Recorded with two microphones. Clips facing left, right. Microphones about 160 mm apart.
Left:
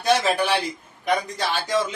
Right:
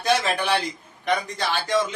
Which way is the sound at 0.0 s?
5° left (ahead or behind).